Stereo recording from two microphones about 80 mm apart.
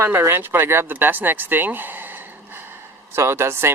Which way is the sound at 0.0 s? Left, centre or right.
Right.